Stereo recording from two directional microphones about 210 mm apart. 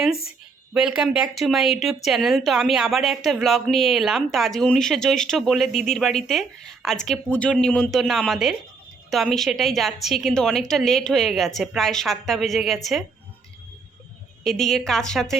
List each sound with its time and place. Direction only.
0.7 s speech: 5° right (ahead or behind)
14.4 s speech: centre (ahead or behind)